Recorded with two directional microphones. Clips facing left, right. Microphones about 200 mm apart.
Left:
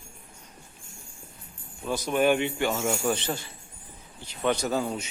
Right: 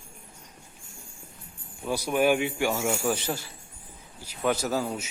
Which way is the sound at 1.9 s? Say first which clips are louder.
Even; 10° right (ahead or behind).